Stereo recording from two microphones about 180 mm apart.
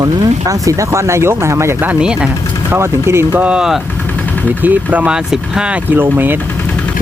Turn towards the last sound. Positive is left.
turn(degrees=-10)  # may be behind; listen again after turning